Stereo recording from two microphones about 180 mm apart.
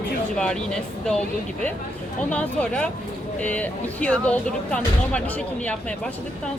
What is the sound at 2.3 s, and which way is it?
Speech, 5° left (ahead or behind).